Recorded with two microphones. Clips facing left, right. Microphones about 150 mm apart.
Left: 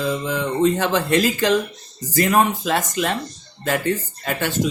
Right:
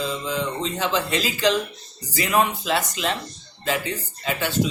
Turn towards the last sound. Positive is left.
turn(degrees=50)  # may be behind; listen again after turning